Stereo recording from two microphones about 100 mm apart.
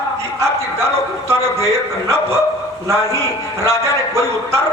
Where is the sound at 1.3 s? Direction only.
25° right (ahead or behind).